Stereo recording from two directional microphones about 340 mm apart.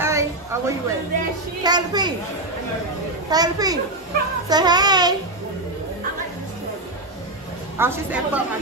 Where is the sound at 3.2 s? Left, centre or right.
Centre.